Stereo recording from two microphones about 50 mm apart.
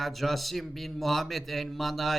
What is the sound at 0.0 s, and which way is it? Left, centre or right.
A man's voice, centre.